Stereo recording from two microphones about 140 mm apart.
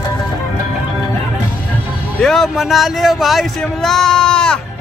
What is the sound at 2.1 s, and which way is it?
Speech, centre (ahead or behind).